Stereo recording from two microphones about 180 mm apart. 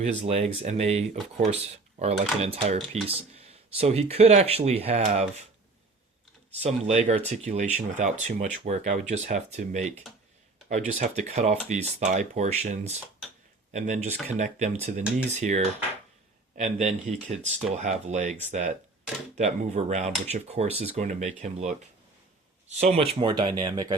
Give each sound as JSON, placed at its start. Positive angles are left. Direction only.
{"t": 0.3, "sound": "speech", "side_deg": -40}
{"t": 6.6, "sound": "speech", "side_deg": -35}
{"t": 19.4, "sound": "speech", "side_deg": -40}